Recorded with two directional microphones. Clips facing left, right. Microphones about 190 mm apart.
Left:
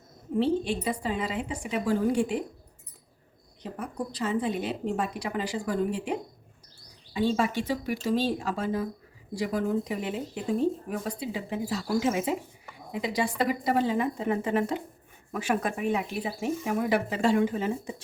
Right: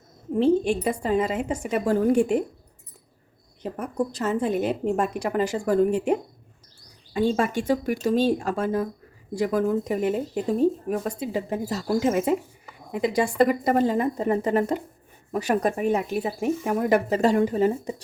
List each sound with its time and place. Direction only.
0.3 s speech: 50° right (ahead or behind)
3.6 s speech: 45° right (ahead or behind)